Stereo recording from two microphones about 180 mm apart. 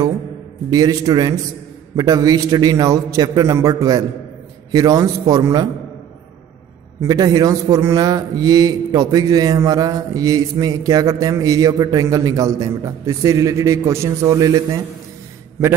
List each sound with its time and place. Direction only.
0.7 s a man's voice: 20° right (ahead or behind)
7.0 s a man's voice: 20° right (ahead or behind)